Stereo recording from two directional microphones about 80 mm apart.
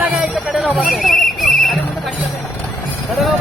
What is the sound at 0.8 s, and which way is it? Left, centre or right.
Horse, centre.